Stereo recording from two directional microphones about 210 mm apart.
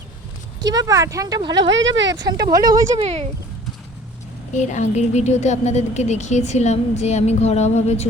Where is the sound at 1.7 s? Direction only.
60° right (ahead or behind).